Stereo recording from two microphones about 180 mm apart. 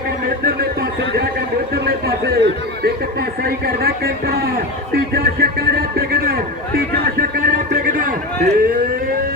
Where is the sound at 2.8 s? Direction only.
60° right (ahead or behind).